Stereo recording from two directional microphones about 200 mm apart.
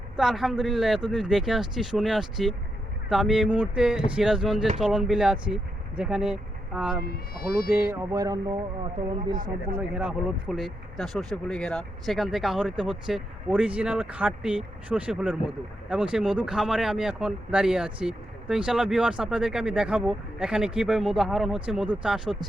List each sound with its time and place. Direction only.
0.2 s speech: centre (ahead or behind); by 9.4 s 25° right (ahead or behind)
9.9 s speech: 5° right (ahead or behind)